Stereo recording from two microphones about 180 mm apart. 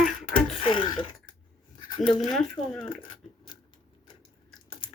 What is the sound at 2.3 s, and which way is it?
Speech, 5° left (ahead or behind).